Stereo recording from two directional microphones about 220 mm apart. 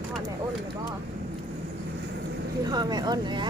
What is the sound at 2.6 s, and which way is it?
Speech, 20° right (ahead or behind).